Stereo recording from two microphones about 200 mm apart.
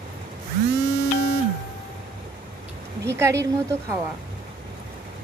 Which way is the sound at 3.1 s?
15° right (ahead or behind).